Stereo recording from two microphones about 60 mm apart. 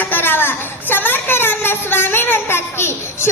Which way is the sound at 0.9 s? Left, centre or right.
Left.